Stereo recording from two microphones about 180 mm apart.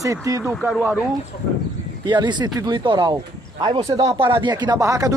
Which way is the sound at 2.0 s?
25° right (ahead or behind).